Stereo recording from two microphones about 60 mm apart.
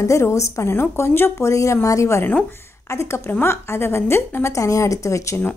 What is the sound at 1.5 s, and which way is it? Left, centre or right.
A woman's voice, left.